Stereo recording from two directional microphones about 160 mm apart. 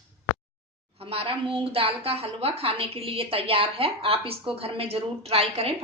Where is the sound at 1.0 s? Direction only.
35° right (ahead or behind).